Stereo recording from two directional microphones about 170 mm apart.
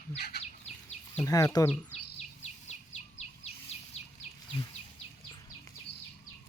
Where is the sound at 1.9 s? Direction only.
40° left (ahead or behind).